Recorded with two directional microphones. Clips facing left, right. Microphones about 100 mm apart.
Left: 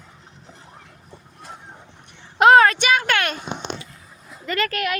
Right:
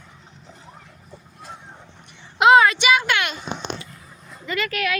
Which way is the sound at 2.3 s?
45° left (ahead or behind).